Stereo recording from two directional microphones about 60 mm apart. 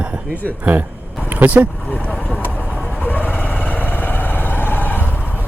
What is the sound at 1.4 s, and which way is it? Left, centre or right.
Speech, right.